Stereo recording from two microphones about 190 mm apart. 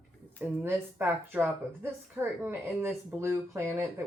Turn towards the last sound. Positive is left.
turn(degrees=-15)  # may be behind; listen again after turning